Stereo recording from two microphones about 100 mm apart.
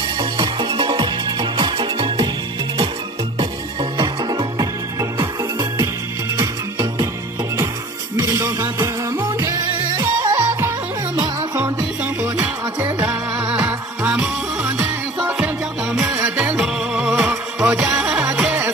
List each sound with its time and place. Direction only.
0.2 s music: 55° right (ahead or behind)
3.3 s music: 50° right (ahead or behind)
8.2 s music: 30° right (ahead or behind)
9.7 s music: 45° right (ahead or behind)
10.3 s music: 35° right (ahead or behind)
15.2 s music: 10° right (ahead or behind)
16.1 s music: 20° right (ahead or behind)